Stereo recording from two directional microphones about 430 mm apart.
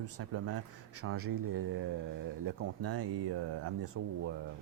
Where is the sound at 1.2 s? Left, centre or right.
Right.